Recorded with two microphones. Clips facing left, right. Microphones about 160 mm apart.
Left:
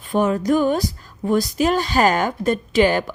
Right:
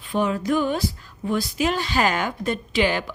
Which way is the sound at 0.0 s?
45° left (ahead or behind).